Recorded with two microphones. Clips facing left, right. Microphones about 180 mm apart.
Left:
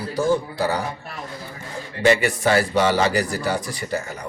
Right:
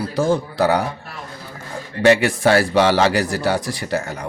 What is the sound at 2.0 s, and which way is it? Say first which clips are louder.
A man's voice: right 4 dB; 70° right (ahead or behind).